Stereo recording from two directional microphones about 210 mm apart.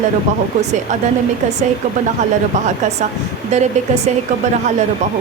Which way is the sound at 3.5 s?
30° right (ahead or behind).